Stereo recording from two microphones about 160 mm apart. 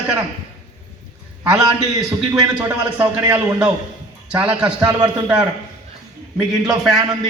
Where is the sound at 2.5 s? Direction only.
10° right (ahead or behind).